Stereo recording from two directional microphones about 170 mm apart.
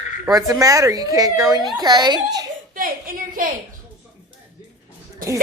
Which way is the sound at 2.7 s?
55° right (ahead or behind).